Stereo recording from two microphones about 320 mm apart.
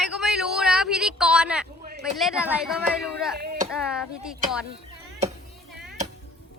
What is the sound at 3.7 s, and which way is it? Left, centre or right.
Speech, centre.